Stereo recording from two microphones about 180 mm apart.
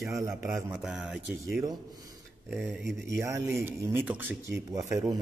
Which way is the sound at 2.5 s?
Centre (ahead or behind).